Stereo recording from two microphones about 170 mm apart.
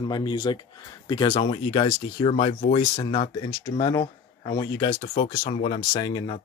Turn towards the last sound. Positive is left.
turn(degrees=25)  # may be behind; listen again after turning